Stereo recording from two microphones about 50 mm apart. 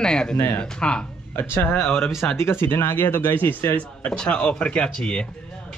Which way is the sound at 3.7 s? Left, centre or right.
Left.